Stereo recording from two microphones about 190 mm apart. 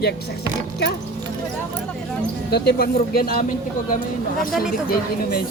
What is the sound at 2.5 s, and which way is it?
Speech, 55° left (ahead or behind).